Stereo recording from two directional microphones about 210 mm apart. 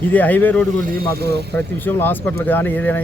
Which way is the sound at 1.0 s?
50° right (ahead or behind).